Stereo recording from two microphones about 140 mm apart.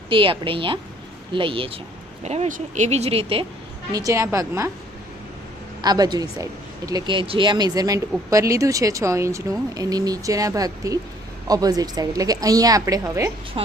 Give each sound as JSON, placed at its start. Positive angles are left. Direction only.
{"t": 0.1, "sound": "a woman's voice", "side_deg": -40}
{"t": 2.2, "sound": "speech", "side_deg": -50}
{"t": 3.9, "sound": "a woman's voice", "side_deg": -25}
{"t": 5.8, "sound": "a woman's voice", "side_deg": -30}